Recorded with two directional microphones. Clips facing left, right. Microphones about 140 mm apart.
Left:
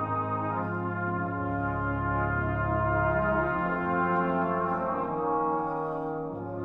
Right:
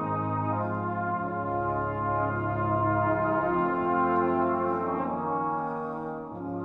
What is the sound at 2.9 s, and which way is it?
Music, 25° right (ahead or behind).